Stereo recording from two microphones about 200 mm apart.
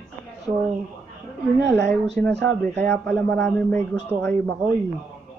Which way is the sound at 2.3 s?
60° right (ahead or behind).